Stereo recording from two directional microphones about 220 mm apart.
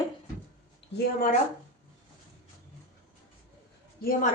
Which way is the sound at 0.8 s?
55° left (ahead or behind).